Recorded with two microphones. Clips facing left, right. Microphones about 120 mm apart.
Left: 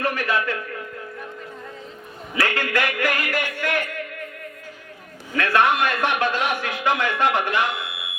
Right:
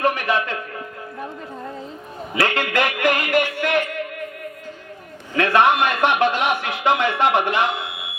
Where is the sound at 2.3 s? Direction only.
20° right (ahead or behind).